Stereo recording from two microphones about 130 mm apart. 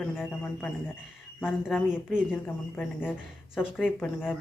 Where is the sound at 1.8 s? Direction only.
5° right (ahead or behind).